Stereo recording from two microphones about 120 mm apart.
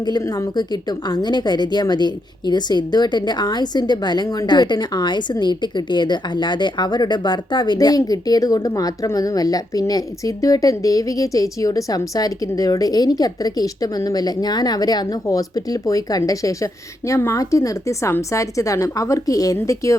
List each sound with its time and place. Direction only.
0.0 s a woman's voice: 35° left (ahead or behind)